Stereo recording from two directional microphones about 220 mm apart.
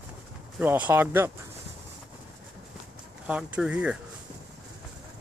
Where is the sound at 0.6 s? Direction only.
10° right (ahead or behind).